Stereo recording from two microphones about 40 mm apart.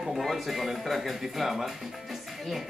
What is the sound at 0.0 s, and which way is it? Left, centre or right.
Speech, centre.